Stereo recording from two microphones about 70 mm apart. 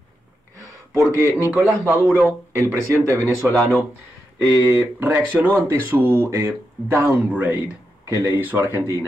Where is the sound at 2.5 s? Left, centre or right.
Right.